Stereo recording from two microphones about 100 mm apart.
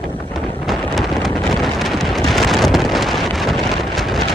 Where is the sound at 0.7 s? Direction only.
Centre (ahead or behind).